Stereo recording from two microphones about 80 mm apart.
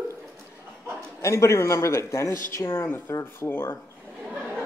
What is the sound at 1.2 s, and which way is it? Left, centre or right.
Speech, left.